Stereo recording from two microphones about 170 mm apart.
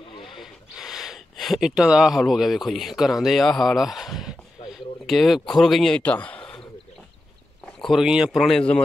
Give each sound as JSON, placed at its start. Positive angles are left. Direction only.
{"t": 0.1, "sound": "wood", "side_deg": 30}
{"t": 0.4, "sound": "speech", "side_deg": -5}
{"t": 7.8, "sound": "speech", "side_deg": 0}